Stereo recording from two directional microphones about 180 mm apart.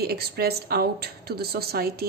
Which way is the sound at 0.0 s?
60° right (ahead or behind).